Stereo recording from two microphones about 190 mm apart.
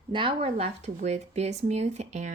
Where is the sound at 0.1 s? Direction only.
25° right (ahead or behind).